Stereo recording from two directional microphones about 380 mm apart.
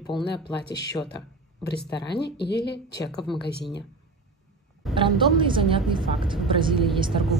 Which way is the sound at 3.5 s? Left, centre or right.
Left.